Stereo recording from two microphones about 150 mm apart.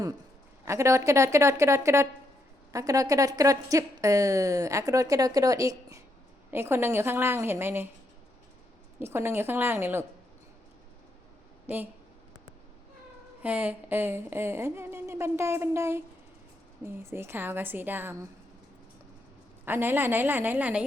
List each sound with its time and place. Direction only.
0.6 s a woman's voice: 20° right (ahead or behind)
9.0 s a woman's voice: 15° right (ahead or behind)
11.6 s speech: 15° right (ahead or behind)
13.4 s a woman's voice: 10° right (ahead or behind)
19.6 s a woman's voice: 15° right (ahead or behind)